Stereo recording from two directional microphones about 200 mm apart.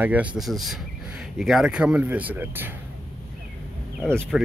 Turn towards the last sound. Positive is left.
turn(degrees=0)  # may be behind; listen again after turning